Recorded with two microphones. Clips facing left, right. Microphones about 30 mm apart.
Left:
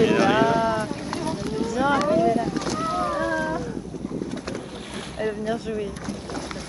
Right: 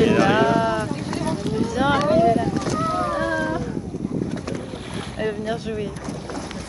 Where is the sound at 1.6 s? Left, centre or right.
Right.